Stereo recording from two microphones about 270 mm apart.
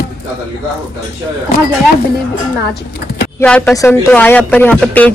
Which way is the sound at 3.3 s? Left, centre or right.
Centre.